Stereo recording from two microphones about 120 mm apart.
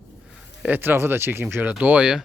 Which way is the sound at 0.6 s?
15° right (ahead or behind).